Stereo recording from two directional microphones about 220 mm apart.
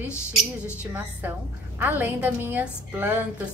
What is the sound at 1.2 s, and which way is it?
A woman's voice, 10° right (ahead or behind).